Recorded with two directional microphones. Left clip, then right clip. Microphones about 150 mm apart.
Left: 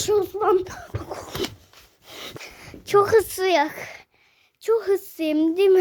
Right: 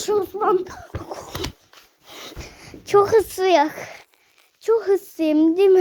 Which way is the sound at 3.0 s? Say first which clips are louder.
Right 1 dB; 30° left (ahead or behind).